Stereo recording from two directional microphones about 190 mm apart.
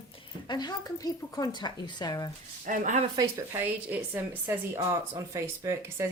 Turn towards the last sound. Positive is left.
turn(degrees=-15)  # may be behind; listen again after turning